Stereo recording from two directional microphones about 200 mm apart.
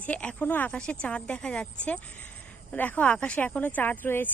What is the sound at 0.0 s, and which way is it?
Speech, 5° left (ahead or behind).